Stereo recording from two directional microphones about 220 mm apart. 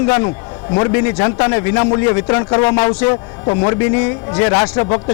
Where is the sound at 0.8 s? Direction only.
20° left (ahead or behind).